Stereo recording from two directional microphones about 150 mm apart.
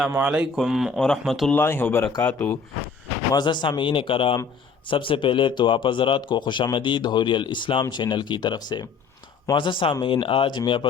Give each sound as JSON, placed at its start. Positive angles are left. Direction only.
{"t": 0.1, "sound": "speech", "side_deg": -10}
{"t": 1.5, "sound": "speech", "side_deg": 15}
{"t": 3.3, "sound": "speech", "side_deg": 30}